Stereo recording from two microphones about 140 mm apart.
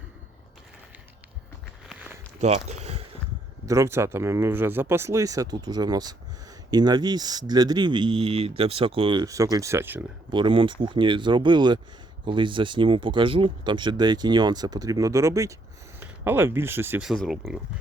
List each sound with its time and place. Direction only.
2.4 s a sound: 55° right (ahead or behind)
3.7 s speech: 20° right (ahead or behind); by 9.2 s 40° right (ahead or behind)
9.2 s speech: 25° right (ahead or behind)
10.3 s speech: 35° right (ahead or behind); by 17.0 s 15° right (ahead or behind)
17.0 s speech: 5° right (ahead or behind)